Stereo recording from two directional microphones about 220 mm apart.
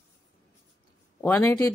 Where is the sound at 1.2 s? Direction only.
10° left (ahead or behind).